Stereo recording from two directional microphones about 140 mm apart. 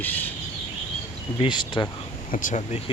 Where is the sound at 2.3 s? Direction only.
70° left (ahead or behind).